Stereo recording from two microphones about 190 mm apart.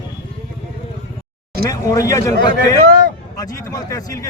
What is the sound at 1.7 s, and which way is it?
Speech, 15° left (ahead or behind).